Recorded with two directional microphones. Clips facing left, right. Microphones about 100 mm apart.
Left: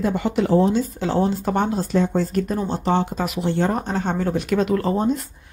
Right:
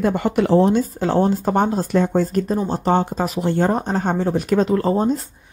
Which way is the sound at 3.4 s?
45° right (ahead or behind).